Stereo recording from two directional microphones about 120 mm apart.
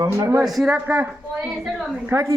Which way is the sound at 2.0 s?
20° right (ahead or behind).